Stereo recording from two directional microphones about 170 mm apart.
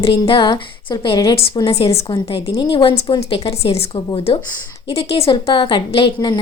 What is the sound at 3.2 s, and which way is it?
A woman's voice, 35° left (ahead or behind).